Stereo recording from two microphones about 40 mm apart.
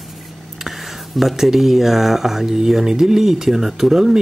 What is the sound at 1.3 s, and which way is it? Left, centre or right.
Speech, centre.